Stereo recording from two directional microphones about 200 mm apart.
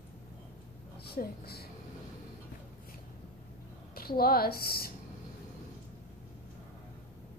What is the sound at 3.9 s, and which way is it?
Speech, 50° left (ahead or behind).